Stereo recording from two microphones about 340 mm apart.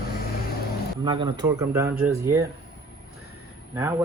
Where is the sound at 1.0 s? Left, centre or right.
Centre.